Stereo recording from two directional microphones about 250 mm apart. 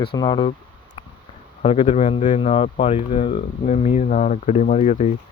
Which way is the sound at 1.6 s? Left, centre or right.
Left.